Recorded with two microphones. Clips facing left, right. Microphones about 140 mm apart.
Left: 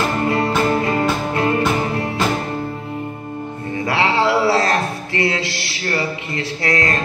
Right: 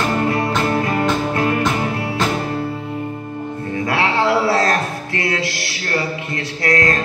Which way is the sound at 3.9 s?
25° left (ahead or behind).